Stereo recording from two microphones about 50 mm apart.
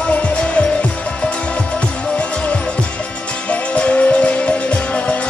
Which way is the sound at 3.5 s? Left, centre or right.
Left.